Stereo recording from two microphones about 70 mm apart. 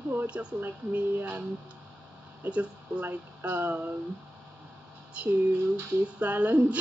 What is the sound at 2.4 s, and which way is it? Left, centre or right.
Laughter, right.